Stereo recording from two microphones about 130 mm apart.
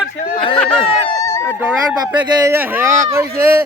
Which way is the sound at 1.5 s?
10° right (ahead or behind).